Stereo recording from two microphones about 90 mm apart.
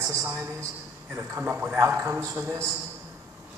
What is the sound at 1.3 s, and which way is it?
A man's voice, 25° right (ahead or behind).